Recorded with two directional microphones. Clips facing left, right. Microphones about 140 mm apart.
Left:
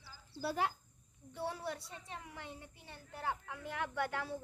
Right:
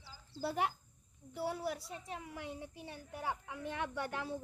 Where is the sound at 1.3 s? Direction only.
5° right (ahead or behind).